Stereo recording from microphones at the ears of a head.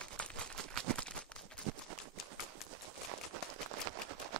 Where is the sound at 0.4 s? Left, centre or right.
Right.